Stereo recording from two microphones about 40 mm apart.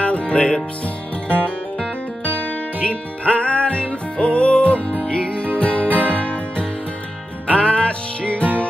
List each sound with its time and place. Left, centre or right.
0.0 s music: left
2.4 s music: left